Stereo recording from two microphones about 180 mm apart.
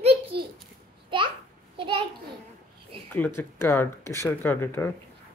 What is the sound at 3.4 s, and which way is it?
Speech, 15° left (ahead or behind).